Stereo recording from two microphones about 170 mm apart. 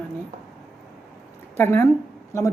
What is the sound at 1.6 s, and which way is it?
Speech, 10° left (ahead or behind).